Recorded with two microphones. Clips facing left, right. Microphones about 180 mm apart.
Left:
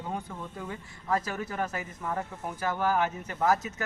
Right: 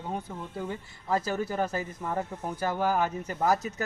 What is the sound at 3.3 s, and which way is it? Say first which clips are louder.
Speech: even; 35° right (ahead or behind).